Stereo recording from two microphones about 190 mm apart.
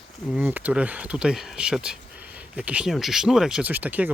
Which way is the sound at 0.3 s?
10° right (ahead or behind).